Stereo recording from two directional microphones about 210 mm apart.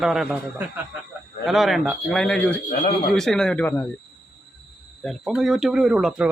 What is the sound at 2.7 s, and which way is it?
Speech, 45° left (ahead or behind).